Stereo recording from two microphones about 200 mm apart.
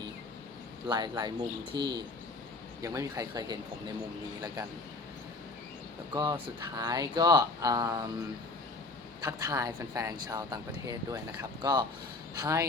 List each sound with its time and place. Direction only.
0.9 s speech: 20° right (ahead or behind)
6.1 s speech: 20° right (ahead or behind)
9.2 s speech: 15° right (ahead or behind)